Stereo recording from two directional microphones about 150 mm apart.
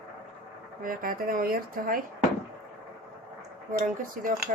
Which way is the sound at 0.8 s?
70° right (ahead or behind).